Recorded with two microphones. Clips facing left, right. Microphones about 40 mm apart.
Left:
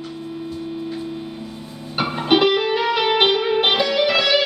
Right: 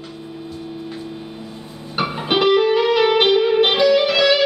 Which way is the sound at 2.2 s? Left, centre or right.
Centre.